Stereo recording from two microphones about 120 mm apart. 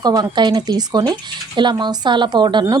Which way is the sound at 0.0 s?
35° right (ahead or behind).